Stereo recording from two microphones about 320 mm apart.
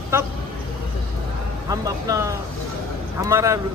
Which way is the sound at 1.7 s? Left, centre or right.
Centre.